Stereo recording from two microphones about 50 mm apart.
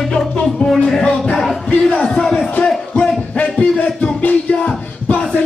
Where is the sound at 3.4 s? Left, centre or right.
Left.